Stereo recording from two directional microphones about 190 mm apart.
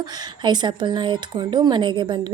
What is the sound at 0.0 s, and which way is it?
Speech, 25° right (ahead or behind).